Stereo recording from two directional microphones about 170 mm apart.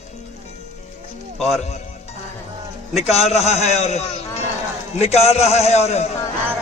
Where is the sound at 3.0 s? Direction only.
40° left (ahead or behind).